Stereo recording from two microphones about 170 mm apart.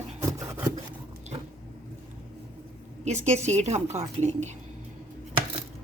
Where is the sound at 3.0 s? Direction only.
45° right (ahead or behind).